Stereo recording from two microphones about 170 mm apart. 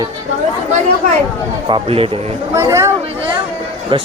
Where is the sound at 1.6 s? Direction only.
30° right (ahead or behind).